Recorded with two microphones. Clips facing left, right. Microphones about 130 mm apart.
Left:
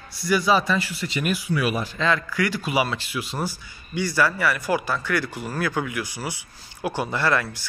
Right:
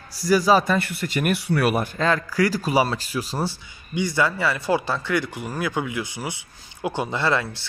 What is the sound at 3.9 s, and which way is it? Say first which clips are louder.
Speech: even; 20° right (ahead or behind).